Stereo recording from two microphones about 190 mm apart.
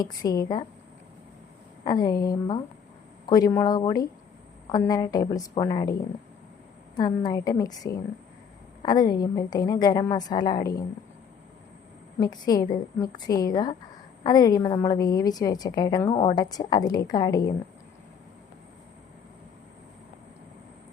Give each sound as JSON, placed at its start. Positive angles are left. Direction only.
{"t": 0.0, "sound": "a woman's voice", "side_deg": 20}
{"t": 1.8, "sound": "a woman's voice", "side_deg": 20}
{"t": 12.2, "sound": "a woman's voice", "side_deg": 20}